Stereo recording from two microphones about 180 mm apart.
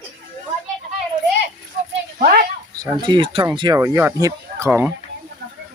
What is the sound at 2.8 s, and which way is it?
Speech, 25° right (ahead or behind).